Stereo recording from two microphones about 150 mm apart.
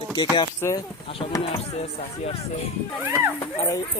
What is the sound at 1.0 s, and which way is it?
Speech, 40° left (ahead or behind).